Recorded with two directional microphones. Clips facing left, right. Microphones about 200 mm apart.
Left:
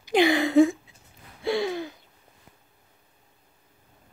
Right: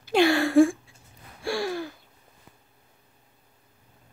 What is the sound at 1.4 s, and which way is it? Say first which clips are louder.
Gasp: left 2 dB; 20° left (ahead or behind).